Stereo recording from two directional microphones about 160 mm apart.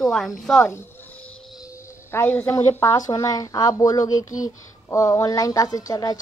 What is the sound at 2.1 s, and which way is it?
A woman's voice, 15° left (ahead or behind).